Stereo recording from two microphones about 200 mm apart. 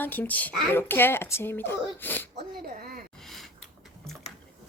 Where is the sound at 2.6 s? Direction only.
45° right (ahead or behind).